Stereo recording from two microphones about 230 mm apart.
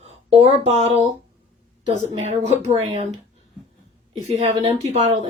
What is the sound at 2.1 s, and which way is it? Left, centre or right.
Speech, right.